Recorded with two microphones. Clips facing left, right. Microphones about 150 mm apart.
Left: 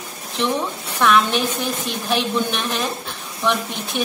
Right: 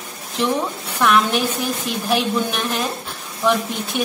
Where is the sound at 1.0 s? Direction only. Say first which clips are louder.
Even; 5° right (ahead or behind).